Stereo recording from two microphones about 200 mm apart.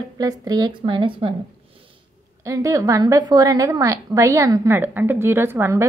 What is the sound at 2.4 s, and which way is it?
A woman's voice, 15° right (ahead or behind).